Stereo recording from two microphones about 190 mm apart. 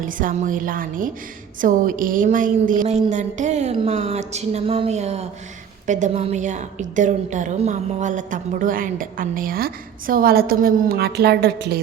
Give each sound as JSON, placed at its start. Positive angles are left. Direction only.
{"t": 0.0, "sound": "a woman's voice", "side_deg": -45}